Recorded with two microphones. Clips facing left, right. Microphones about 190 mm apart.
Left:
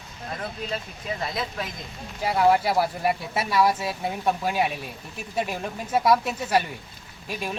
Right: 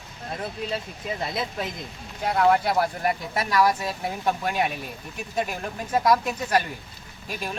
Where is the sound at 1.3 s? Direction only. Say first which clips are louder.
Right 1 dB; 25° right (ahead or behind).